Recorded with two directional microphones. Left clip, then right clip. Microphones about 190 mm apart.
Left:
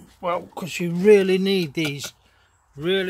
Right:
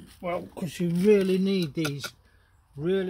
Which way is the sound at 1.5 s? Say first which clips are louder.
Left 6 dB; 10° left (ahead or behind).